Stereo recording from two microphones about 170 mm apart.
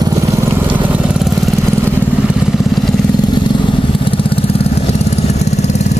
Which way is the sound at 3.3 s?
30° left (ahead or behind).